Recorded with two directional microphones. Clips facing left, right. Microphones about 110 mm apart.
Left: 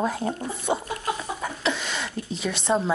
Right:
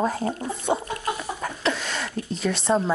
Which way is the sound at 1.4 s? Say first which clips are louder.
Right 1 dB; centre (ahead or behind).